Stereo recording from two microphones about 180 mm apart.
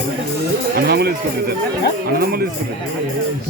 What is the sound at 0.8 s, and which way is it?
Speech, 60° right (ahead or behind).